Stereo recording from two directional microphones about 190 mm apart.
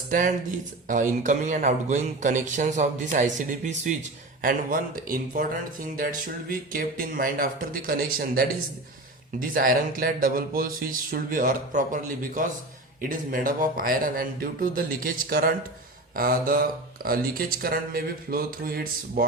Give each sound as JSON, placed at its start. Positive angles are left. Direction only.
{"t": 0.1, "sound": "a man's voice", "side_deg": -45}
{"t": 9.4, "sound": "speech", "side_deg": -50}